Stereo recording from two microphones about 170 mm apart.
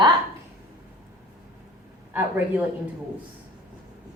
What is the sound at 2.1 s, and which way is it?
Speech, 10° right (ahead or behind).